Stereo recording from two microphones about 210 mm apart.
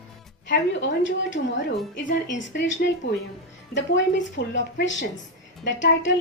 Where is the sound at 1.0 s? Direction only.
60° left (ahead or behind).